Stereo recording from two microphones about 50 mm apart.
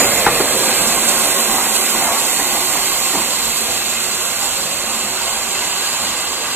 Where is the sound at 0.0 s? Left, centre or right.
Right.